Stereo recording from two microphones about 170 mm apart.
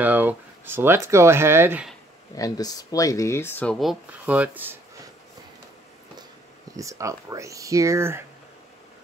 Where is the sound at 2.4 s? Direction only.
20° left (ahead or behind); by 4.8 s 10° right (ahead or behind).